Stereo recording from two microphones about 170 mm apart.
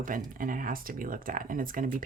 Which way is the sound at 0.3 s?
55° right (ahead or behind).